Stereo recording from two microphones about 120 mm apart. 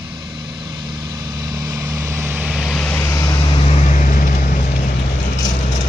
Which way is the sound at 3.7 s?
85° left.